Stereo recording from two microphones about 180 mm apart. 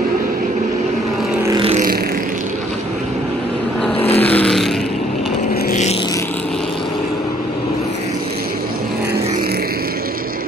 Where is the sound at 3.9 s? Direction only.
35° left (ahead or behind).